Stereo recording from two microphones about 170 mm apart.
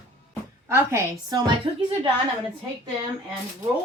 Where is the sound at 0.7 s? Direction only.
15° right (ahead or behind).